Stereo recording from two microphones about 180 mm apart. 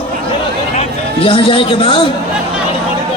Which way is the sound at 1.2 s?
30° left (ahead or behind).